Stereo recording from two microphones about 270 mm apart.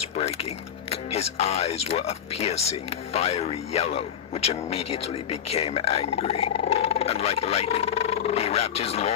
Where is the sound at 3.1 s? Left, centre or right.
Left.